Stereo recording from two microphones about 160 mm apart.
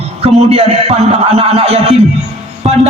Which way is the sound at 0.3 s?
40° right (ahead or behind).